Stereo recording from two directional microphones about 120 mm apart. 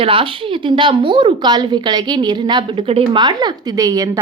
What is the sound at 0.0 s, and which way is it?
A woman's voice, 45° right (ahead or behind).